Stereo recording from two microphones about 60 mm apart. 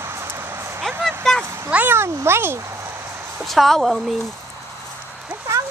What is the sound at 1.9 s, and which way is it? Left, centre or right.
Speech, right.